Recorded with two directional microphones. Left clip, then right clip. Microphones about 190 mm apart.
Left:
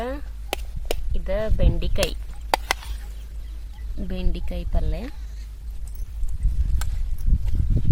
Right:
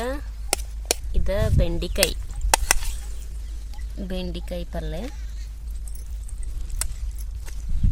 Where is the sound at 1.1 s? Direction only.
20° right (ahead or behind).